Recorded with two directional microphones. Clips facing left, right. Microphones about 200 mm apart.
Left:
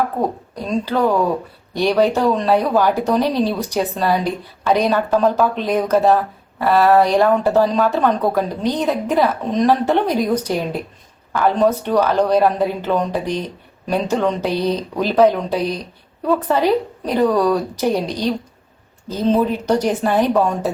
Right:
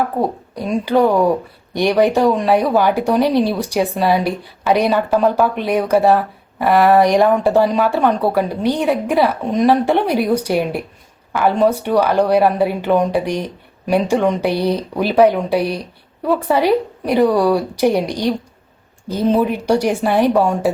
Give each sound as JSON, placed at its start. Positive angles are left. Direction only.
{"t": 0.2, "sound": "speech", "side_deg": -10}